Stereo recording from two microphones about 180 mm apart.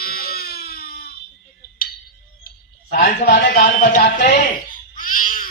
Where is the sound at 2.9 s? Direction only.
55° left (ahead or behind).